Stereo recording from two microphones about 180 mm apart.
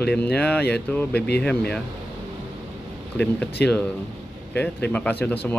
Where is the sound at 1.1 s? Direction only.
65° left (ahead or behind).